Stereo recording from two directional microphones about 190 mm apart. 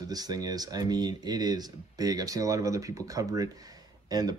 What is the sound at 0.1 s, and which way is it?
Speech, 20° right (ahead or behind).